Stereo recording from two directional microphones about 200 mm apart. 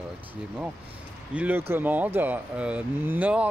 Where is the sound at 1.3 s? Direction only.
10° right (ahead or behind).